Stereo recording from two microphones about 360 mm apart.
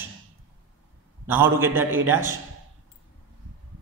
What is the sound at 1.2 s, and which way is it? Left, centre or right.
A man's voice, centre.